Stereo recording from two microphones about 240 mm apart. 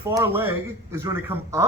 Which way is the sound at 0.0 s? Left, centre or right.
Centre.